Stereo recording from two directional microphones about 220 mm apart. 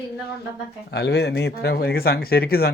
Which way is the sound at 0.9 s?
50° left (ahead or behind).